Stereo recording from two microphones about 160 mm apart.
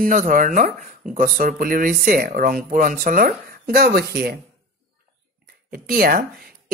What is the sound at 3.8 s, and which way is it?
Speech, 80° right.